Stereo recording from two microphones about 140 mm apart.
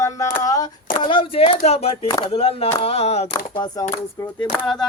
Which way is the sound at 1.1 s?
40° left (ahead or behind).